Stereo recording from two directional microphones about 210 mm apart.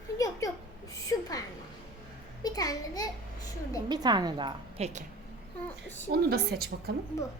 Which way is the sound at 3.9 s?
20° right (ahead or behind).